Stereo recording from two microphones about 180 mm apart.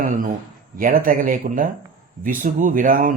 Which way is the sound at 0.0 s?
50° right (ahead or behind).